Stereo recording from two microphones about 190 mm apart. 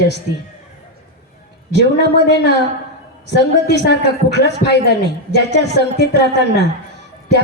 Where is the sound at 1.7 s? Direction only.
60° left (ahead or behind).